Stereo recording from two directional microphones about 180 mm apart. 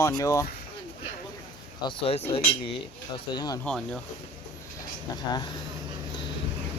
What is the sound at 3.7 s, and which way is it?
Speech, 5° left (ahead or behind).